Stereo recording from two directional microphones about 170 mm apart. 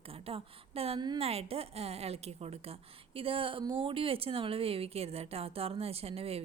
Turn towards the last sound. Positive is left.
turn(degrees=-35)  # may be behind; listen again after turning